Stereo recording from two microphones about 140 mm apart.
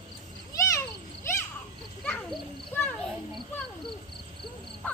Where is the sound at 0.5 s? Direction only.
20° left (ahead or behind).